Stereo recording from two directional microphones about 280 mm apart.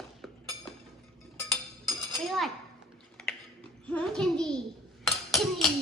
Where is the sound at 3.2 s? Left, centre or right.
Centre.